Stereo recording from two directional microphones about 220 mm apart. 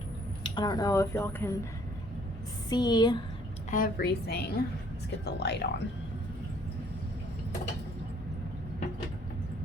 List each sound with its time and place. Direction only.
0.4 s speech: 20° left (ahead or behind)
2.6 s a woman's voice: 20° left (ahead or behind)
3.7 s a woman's voice: 40° left (ahead or behind)